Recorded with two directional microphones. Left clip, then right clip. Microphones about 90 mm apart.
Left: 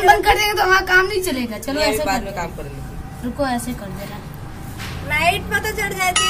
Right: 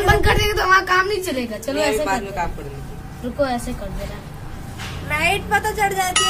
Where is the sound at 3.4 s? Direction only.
15° left (ahead or behind).